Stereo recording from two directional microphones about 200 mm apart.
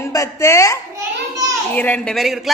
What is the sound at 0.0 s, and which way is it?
A woman's voice, 15° left (ahead or behind).